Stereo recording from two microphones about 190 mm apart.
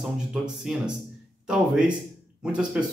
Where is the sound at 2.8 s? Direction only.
5° right (ahead or behind).